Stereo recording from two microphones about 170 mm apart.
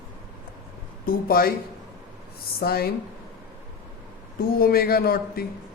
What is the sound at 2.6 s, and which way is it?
Speech, 65° left (ahead or behind).